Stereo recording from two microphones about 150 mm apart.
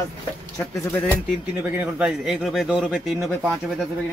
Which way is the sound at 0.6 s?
15° left (ahead or behind).